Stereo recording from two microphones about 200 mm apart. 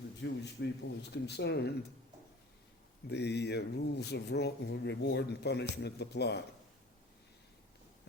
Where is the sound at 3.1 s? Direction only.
55° left (ahead or behind).